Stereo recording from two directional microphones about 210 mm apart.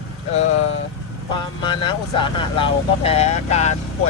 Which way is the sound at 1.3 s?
20° left (ahead or behind).